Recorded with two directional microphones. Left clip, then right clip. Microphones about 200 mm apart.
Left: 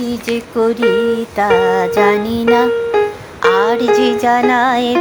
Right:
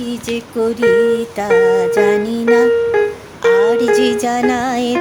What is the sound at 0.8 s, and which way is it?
Speech, 30° left (ahead or behind).